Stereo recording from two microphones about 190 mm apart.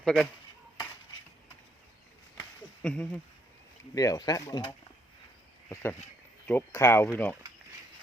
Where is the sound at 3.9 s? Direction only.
20° left (ahead or behind).